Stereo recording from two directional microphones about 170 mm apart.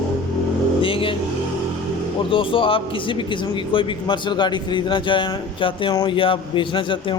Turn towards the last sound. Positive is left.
turn(degrees=30)  # may be behind; listen again after turning